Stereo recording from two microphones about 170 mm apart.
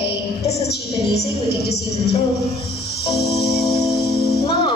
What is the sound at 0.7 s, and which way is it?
Music, 70° left (ahead or behind).